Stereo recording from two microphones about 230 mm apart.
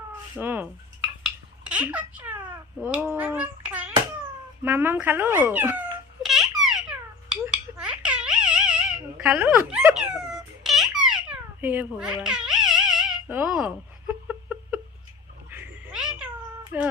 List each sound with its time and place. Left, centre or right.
0.3 s speech: centre
1.2 s a sound: centre
2.8 s a child's voice: centre
6.2 s a sound: centre
15.4 s cat: centre
16.7 s speech: centre